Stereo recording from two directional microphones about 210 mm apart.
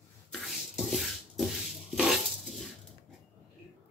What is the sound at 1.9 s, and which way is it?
Dishes, centre (ahead or behind).